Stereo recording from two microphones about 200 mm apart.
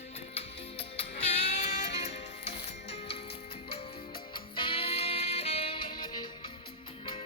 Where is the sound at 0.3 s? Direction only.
30° left (ahead or behind).